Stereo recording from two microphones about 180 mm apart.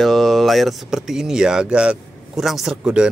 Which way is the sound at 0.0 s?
Centre (ahead or behind).